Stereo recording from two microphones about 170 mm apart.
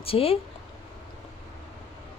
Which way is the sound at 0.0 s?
35° left (ahead or behind).